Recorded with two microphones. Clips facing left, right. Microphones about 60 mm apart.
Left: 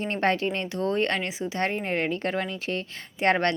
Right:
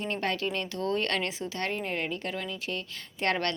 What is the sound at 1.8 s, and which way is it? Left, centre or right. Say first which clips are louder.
Speech: left 5 dB; left.